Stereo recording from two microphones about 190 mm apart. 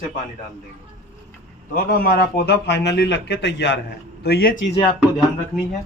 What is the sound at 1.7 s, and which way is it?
Speech, 50° left (ahead or behind).